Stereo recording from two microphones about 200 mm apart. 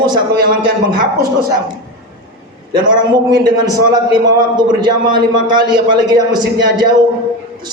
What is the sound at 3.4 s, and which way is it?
A man's voice, 20° right (ahead or behind).